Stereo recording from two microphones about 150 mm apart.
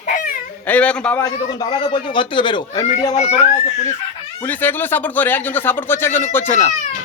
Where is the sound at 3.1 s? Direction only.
50° left (ahead or behind).